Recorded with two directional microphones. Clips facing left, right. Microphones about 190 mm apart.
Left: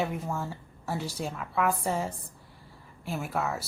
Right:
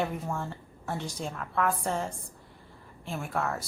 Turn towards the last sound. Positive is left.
turn(degrees=5)  # may be behind; listen again after turning